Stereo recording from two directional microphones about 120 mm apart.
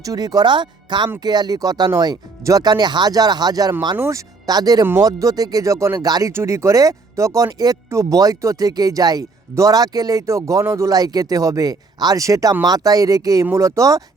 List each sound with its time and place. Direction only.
0.0 s speech: 30° right (ahead or behind)
3.9 s speech: 20° right (ahead or behind)
4.4 s speech: 30° right (ahead or behind)